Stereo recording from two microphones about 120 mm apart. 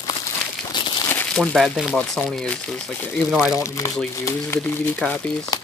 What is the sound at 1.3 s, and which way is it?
Speech, 5° left (ahead or behind).